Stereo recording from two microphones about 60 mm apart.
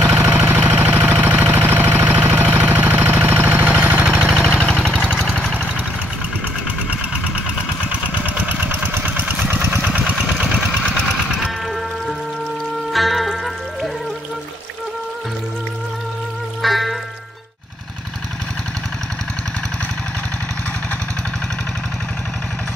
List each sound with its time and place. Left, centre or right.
0.1 s a sound: right
4.4 s a sound: centre
7.9 s lawn mower: right
9.5 s engine: right
12.9 s music: centre
16.6 s music: centre